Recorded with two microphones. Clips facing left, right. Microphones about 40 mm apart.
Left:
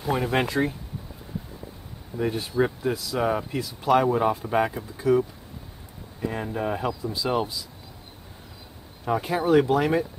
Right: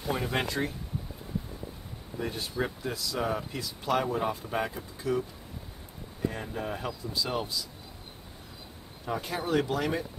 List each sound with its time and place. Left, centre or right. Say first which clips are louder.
0.0 s speech: left 6 dB; centre
2.1 s speech: left 8 dB; centre
6.2 s speech: left 5 dB; centre
9.0 s speech: left 8 dB; centre